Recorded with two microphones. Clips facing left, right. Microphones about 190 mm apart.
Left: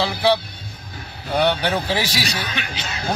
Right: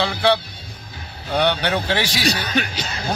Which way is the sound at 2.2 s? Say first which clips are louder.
Right 6 dB; 40° right (ahead or behind).